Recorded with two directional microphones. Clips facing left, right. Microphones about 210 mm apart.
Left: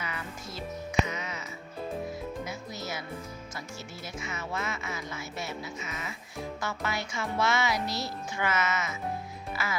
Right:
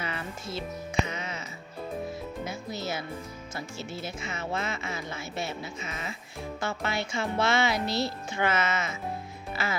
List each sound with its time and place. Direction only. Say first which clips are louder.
0.0 s music: right 3 dB; 30° right (ahead or behind)
2.4 s music: right 3 dB; 30° right (ahead or behind)
3.5 s speech: right 4 dB; 30° right (ahead or behind)